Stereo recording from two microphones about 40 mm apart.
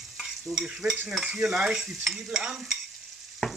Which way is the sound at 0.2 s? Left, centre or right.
Centre.